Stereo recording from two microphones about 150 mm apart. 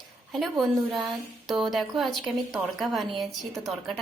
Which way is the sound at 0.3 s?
Centre (ahead or behind).